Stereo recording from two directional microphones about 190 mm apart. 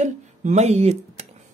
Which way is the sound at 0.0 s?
40° right (ahead or behind).